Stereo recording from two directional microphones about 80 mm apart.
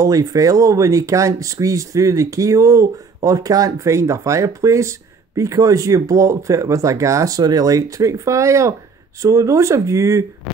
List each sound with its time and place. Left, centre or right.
0.0 s speech: right